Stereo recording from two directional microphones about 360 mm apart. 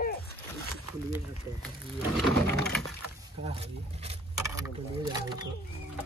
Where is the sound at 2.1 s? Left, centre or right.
Centre.